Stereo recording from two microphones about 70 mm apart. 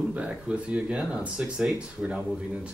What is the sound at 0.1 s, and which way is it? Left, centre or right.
Speech, centre.